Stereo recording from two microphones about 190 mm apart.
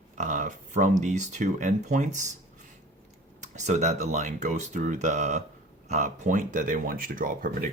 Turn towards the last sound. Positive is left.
turn(degrees=-45)  # may be behind; listen again after turning